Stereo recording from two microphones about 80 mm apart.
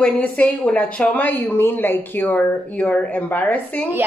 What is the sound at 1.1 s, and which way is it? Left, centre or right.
Speech, left.